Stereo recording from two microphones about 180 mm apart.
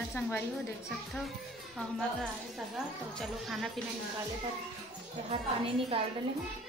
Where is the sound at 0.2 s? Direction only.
15° left (ahead or behind).